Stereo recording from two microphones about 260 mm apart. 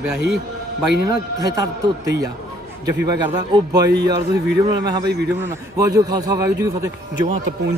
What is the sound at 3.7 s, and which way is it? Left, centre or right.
Speech, right.